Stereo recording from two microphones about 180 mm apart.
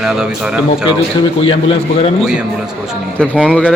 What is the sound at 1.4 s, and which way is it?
Speech, 30° left (ahead or behind).